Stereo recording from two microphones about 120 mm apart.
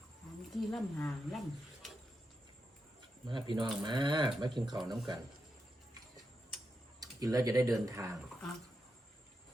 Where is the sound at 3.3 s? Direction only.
40° right (ahead or behind).